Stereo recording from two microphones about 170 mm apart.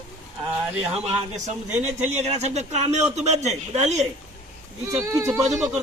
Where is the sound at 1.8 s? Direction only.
40° right (ahead or behind).